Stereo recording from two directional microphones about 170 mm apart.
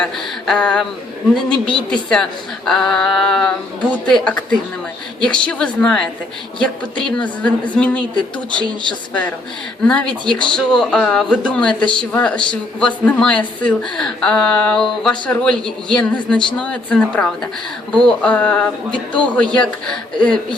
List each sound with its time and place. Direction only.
0.0 s a woman's voice: 5° left (ahead or behind)
8.5 s speech: 25° right (ahead or behind)
9.8 s a woman's voice: 5° left (ahead or behind)